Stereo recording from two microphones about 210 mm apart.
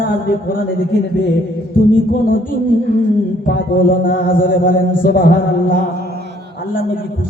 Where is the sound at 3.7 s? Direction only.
40° left (ahead or behind).